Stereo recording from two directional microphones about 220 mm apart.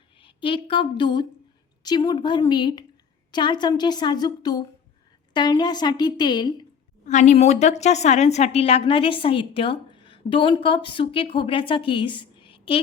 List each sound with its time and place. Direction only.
0.2 s speech: 25° left (ahead or behind)
7.0 s speech: 35° left (ahead or behind)